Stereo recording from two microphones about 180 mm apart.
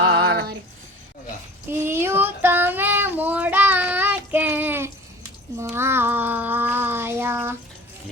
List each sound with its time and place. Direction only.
0.1 s female singing: 60° right (ahead or behind)
1.7 s child singing: 15° right (ahead or behind)